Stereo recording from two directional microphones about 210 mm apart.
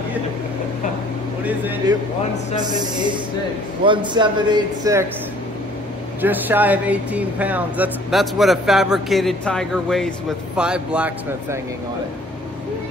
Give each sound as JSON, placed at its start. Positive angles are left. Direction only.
{"t": 2.6, "sound": "a man's voice", "side_deg": -20}
{"t": 6.2, "sound": "speech", "side_deg": -10}